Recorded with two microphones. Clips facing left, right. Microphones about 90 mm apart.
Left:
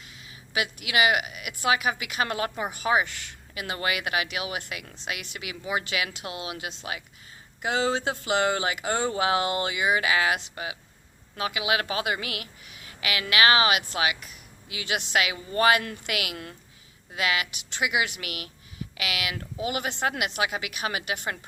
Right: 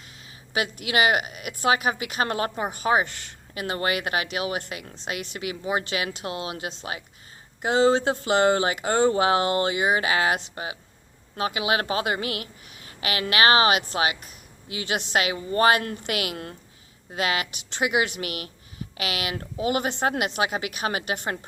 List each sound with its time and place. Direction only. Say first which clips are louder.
0.0 s speech: even; 40° right (ahead or behind)